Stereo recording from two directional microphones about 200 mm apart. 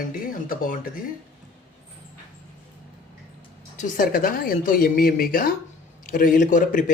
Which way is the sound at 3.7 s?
40° left (ahead or behind).